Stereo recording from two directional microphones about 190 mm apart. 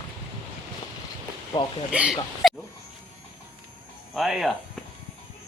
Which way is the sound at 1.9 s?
5° right (ahead or behind).